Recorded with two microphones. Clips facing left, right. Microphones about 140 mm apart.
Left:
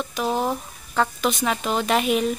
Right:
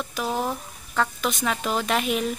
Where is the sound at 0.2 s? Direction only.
25° left (ahead or behind).